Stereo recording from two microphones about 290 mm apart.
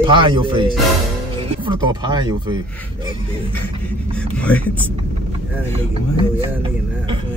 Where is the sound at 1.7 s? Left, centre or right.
Centre.